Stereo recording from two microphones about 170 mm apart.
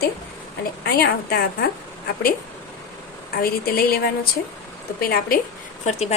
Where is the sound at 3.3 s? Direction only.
65° left (ahead or behind).